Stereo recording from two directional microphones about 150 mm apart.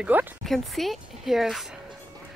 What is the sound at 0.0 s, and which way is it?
Speech, 10° right (ahead or behind).